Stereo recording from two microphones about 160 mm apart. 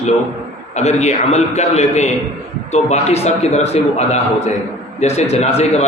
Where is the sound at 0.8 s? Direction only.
45° left (ahead or behind).